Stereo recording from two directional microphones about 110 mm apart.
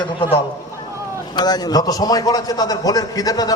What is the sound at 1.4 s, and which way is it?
A man's voice, 40° left (ahead or behind).